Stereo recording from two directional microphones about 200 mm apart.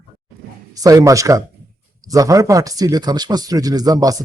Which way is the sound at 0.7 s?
15° right (ahead or behind).